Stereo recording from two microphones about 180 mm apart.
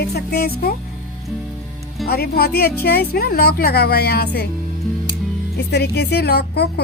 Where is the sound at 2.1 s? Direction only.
60° left (ahead or behind).